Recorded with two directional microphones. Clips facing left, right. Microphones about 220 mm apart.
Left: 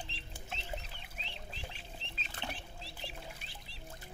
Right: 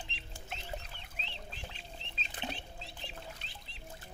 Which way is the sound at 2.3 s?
20° right (ahead or behind).